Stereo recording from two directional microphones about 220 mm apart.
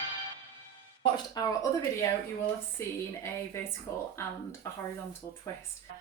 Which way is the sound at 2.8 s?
10° left (ahead or behind).